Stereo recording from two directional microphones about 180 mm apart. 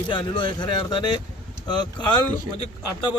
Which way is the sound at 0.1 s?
25° left (ahead or behind).